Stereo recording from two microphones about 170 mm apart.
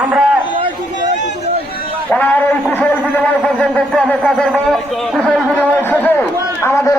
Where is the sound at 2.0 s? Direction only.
10° left (ahead or behind).